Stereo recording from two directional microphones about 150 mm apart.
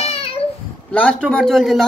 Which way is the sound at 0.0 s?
40° left (ahead or behind).